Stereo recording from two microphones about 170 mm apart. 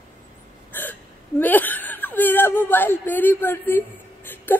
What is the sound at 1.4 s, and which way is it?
Speech, 10° left (ahead or behind).